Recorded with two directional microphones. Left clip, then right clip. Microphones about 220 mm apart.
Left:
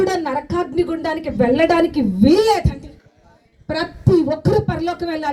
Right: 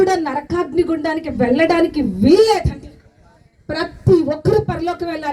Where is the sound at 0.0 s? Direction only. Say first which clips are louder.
Right 3 dB; 55° left (ahead or behind).